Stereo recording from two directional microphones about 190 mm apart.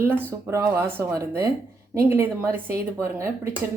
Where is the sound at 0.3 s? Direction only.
15° right (ahead or behind).